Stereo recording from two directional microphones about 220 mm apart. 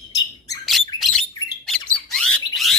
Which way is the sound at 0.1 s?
15° left (ahead or behind).